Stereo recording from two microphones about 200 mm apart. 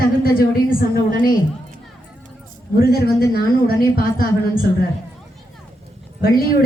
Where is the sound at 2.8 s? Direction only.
50° left (ahead or behind).